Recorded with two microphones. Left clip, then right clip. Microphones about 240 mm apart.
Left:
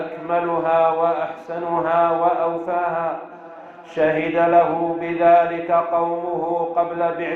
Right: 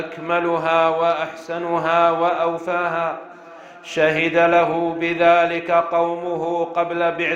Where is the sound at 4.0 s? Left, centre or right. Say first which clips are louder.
Right 2 dB; right.